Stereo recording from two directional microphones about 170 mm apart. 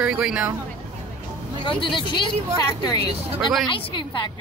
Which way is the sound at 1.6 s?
30° left (ahead or behind).